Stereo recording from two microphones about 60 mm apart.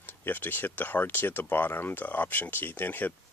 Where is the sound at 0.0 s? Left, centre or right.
Left.